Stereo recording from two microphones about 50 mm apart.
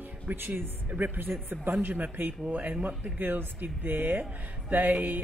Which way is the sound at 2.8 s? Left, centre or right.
Right.